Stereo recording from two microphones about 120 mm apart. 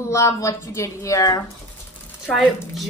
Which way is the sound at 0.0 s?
25° left (ahead or behind).